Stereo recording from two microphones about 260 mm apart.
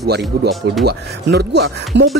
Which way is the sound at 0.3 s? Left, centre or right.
Right.